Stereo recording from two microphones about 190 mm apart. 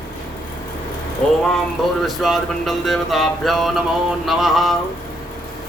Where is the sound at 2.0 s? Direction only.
Centre (ahead or behind).